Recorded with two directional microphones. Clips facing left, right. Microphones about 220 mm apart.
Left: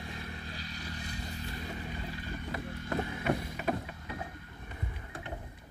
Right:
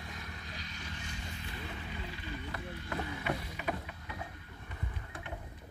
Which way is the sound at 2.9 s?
45° left (ahead or behind).